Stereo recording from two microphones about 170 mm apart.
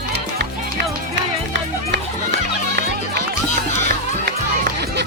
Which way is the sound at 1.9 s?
90° right.